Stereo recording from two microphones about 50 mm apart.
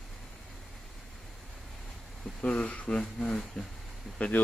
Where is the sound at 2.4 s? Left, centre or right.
Left.